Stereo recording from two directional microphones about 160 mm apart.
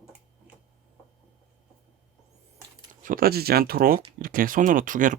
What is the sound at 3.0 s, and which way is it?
Speech, 65° right (ahead or behind).